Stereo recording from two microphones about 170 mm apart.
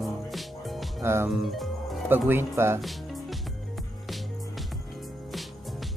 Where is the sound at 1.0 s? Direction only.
15° right (ahead or behind).